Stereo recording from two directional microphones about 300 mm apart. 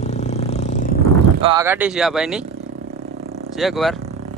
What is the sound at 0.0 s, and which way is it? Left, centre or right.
Vehicle, left.